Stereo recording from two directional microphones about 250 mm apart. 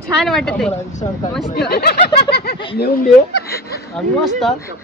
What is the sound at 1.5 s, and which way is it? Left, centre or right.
Speech, left.